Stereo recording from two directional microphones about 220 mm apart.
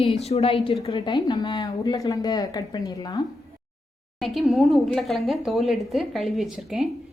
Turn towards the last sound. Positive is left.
turn(degrees=0)  # may be behind; listen again after turning